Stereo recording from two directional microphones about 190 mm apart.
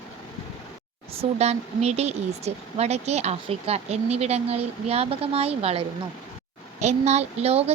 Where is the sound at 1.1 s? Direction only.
35° right (ahead or behind).